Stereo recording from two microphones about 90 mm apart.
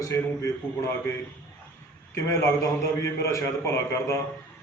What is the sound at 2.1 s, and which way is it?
A man's voice, 35° left (ahead or behind).